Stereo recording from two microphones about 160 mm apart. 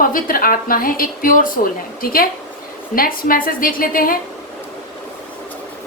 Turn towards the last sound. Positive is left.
turn(degrees=60)  # may be behind; listen again after turning